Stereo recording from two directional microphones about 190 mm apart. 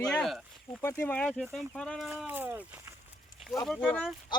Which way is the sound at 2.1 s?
10° right (ahead or behind).